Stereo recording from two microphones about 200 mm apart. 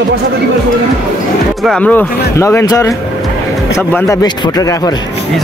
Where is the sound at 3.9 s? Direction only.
15° left (ahead or behind).